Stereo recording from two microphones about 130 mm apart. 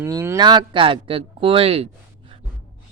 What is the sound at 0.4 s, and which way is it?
Speech, 35° right (ahead or behind).